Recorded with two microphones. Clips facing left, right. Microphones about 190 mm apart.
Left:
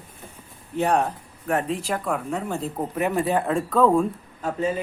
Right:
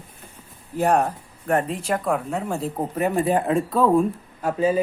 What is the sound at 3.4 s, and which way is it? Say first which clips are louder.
Speech: even; 10° right (ahead or behind).